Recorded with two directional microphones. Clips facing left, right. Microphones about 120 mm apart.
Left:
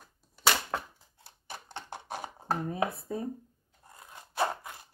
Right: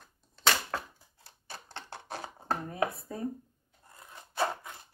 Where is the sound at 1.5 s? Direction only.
15° left (ahead or behind).